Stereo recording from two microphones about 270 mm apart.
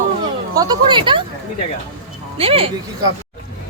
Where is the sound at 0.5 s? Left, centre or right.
Centre.